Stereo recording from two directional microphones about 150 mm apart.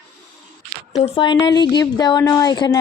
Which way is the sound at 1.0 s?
30° left (ahead or behind).